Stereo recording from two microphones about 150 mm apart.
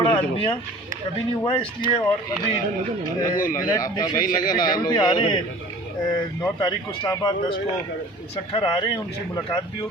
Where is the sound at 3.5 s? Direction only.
25° left (ahead or behind).